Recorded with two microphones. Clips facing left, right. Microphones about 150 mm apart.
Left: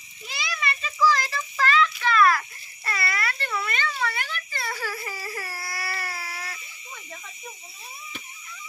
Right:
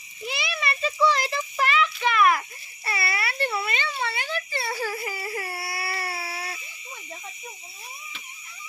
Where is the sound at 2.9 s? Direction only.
25° right (ahead or behind).